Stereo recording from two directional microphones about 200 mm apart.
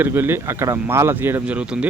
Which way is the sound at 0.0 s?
10° right (ahead or behind).